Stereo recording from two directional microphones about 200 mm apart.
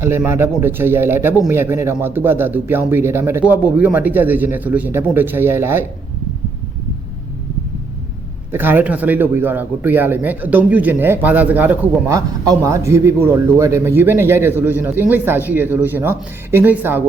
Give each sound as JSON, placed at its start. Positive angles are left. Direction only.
{"t": 0.0, "sound": "speech", "side_deg": -10}
{"t": 8.5, "sound": "speech", "side_deg": -10}